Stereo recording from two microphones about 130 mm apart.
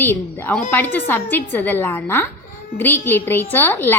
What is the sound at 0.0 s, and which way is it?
A woman's voice, 15° left (ahead or behind).